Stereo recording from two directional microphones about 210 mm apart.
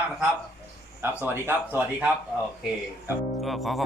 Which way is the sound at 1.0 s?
10° right (ahead or behind).